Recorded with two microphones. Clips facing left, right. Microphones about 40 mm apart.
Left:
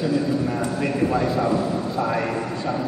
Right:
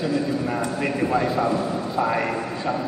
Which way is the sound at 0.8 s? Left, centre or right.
Centre.